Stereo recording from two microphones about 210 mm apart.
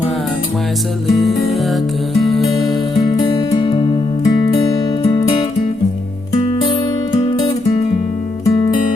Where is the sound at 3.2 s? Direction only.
20° left (ahead or behind).